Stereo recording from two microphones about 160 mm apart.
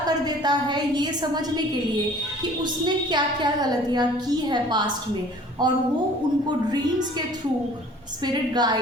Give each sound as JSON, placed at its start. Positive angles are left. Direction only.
{"t": 0.0, "sound": "a woman's voice", "side_deg": -25}
{"t": 2.8, "sound": "a woman's voice", "side_deg": -30}
{"t": 8.2, "sound": "a woman's voice", "side_deg": -25}